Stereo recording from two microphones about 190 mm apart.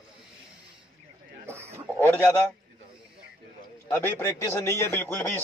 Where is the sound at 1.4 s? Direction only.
15° right (ahead or behind).